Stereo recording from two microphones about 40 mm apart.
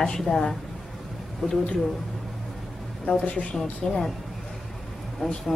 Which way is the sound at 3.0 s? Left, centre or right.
Left.